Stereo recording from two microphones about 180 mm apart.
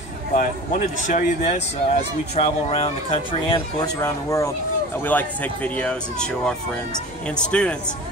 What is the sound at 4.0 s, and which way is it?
Speech, 15° left (ahead or behind).